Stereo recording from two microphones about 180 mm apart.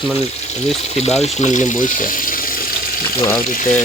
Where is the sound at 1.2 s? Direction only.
40° left (ahead or behind).